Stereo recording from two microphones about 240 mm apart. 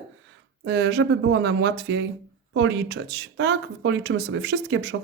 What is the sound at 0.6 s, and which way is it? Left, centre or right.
Speech, right.